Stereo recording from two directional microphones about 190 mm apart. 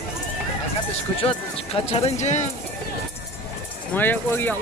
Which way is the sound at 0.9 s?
30° left (ahead or behind).